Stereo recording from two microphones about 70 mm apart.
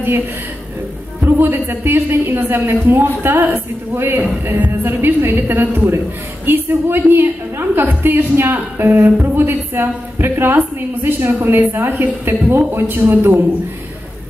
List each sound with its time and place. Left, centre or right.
1.2 s a woman's voice: right